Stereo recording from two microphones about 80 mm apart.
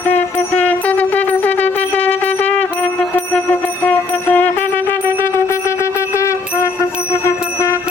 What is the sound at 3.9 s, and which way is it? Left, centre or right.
Music, centre.